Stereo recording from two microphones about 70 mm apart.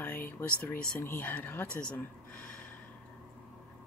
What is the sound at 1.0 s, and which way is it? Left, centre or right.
Speech, left.